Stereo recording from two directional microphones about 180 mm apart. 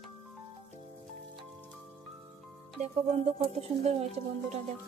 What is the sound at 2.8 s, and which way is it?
Speech, 35° right (ahead or behind).